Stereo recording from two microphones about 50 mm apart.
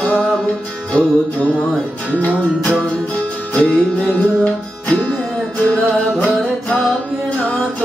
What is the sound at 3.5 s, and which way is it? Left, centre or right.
Music, left.